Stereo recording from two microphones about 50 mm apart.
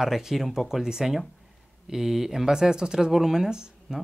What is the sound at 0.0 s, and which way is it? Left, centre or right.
Speech, centre.